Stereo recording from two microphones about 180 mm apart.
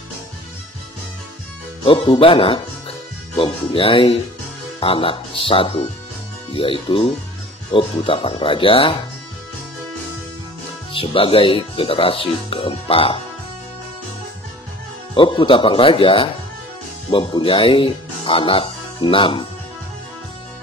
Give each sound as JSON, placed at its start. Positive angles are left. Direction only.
{"t": 1.9, "sound": "speech", "side_deg": 30}
{"t": 10.9, "sound": "speech", "side_deg": 30}
{"t": 15.1, "sound": "speech", "side_deg": 25}